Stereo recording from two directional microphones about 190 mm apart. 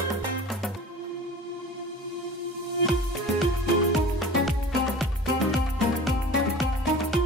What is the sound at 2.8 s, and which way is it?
Music, centre (ahead or behind).